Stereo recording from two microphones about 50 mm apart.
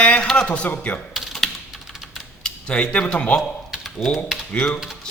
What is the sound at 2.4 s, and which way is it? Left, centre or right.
Cutlery, left.